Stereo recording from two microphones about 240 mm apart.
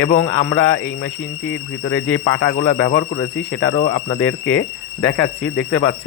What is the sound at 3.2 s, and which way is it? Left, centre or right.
Speech, left.